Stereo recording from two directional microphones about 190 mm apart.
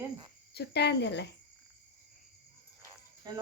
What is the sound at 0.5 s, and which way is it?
Speech, 60° left (ahead or behind).